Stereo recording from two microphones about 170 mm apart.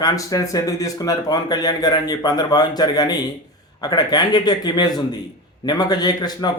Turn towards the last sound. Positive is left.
turn(degrees=25)  # may be behind; listen again after turning